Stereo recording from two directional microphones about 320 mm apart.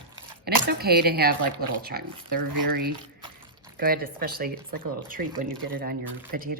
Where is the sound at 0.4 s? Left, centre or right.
Right.